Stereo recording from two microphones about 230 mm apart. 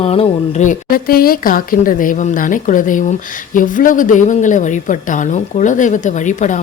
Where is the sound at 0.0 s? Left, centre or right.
Left.